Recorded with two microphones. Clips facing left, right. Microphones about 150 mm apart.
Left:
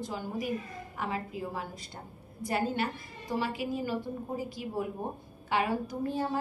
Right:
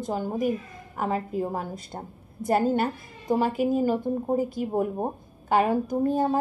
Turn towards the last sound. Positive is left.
turn(degrees=-45)  # may be behind; listen again after turning